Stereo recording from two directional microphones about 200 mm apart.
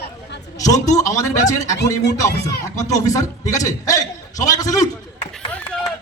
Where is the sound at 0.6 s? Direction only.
15° left (ahead or behind).